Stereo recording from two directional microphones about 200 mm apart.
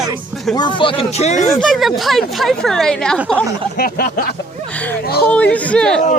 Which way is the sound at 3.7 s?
50° left (ahead or behind).